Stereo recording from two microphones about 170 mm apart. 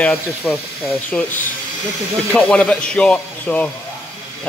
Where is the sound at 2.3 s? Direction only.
5° left (ahead or behind).